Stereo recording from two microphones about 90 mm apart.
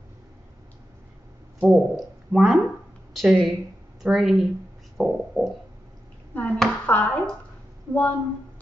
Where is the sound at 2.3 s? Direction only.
5° right (ahead or behind).